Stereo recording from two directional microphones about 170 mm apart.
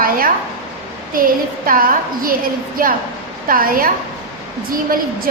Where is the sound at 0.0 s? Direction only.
55° right (ahead or behind).